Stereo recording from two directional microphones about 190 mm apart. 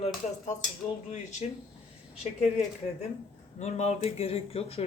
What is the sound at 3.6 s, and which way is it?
Speech, 35° left (ahead or behind).